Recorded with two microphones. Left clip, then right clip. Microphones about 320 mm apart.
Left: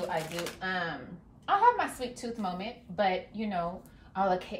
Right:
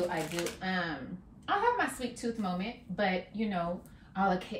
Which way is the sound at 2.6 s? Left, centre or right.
Centre.